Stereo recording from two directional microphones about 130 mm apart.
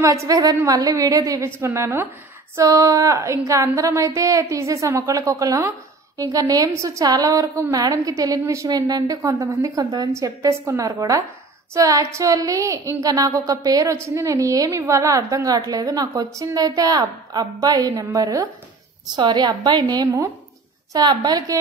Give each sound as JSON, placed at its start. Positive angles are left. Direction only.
{"t": 0.0, "sound": "a woman's voice", "side_deg": -25}